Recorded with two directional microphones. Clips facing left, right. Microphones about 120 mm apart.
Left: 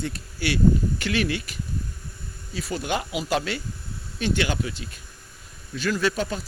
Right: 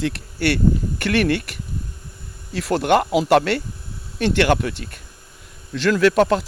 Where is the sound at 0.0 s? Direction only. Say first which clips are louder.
Right 7 dB; 70° right (ahead or behind).